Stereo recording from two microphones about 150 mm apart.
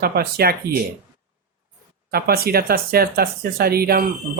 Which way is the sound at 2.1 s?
90° right.